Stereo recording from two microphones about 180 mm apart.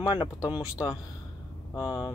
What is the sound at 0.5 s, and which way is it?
Speech, 5° right (ahead or behind).